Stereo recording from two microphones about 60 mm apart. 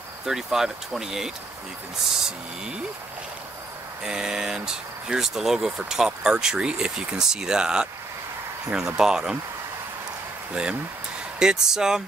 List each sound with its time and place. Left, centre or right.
0.3 s speech: centre
4.0 s speech: centre
10.5 s speech: centre